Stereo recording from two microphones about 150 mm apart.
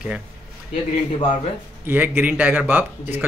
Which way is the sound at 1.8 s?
10° right (ahead or behind).